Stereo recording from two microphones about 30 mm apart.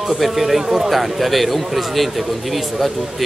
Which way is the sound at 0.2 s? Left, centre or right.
Centre.